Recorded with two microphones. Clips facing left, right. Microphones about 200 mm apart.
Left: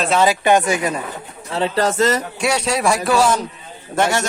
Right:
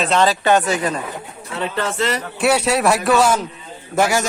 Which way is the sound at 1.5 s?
30° left (ahead or behind).